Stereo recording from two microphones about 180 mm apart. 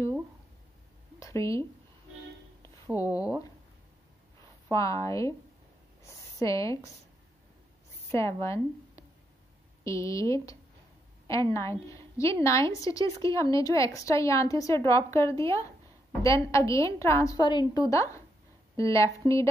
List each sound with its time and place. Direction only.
1.2 s speech: 15° left (ahead or behind)
2.9 s a woman's voice: 20° left (ahead or behind)
4.6 s a woman's voice: 20° left (ahead or behind)
6.4 s a woman's voice: 15° left (ahead or behind)
8.1 s a woman's voice: 15° left (ahead or behind)